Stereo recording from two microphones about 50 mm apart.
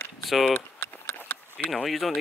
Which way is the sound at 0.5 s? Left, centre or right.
Left.